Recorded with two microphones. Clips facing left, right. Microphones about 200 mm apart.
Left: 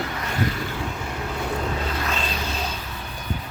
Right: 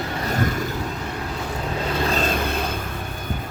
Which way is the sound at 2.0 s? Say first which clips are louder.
Right 6 dB; 45° right (ahead or behind).